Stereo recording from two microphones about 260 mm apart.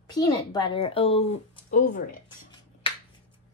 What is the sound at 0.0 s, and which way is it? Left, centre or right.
Speech, centre.